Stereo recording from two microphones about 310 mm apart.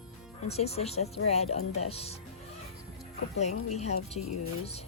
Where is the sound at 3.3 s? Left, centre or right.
Left.